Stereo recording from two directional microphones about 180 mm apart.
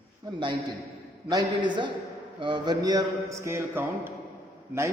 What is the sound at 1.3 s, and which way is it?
A man's voice, 25° right (ahead or behind).